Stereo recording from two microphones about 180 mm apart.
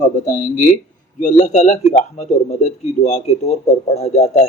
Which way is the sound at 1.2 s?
45° left (ahead or behind).